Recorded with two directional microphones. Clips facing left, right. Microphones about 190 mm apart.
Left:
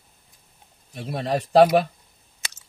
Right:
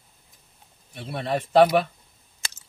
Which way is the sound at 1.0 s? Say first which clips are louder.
Left 2 dB; 40° left (ahead or behind).